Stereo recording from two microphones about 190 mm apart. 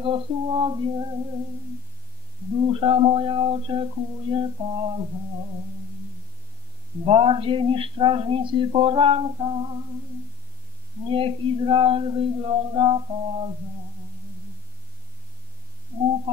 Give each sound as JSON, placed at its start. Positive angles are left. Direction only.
{"t": 0.0, "sound": "speech", "side_deg": -25}
{"t": 2.7, "sound": "speech", "side_deg": -30}
{"t": 7.1, "sound": "speech", "side_deg": -30}
{"t": 11.1, "sound": "speech", "side_deg": -30}